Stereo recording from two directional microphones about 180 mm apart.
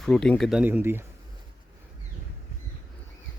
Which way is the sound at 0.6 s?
10° right (ahead or behind).